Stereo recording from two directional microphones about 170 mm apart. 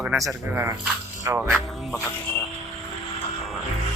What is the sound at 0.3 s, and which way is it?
Speech, 15° right (ahead or behind).